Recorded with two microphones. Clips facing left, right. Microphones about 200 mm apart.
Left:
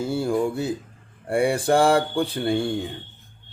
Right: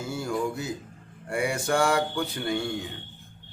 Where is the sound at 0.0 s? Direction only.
30° left (ahead or behind).